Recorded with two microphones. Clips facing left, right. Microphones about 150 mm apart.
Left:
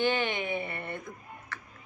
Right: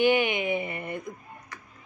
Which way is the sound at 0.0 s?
15° right (ahead or behind).